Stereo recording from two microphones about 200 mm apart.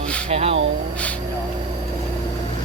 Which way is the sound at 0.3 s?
30° right (ahead or behind).